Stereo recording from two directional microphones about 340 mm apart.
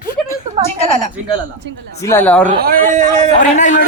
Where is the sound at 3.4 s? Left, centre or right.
Left.